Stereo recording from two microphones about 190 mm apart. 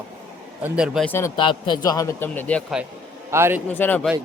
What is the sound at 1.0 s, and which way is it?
Speech, 10° left (ahead or behind).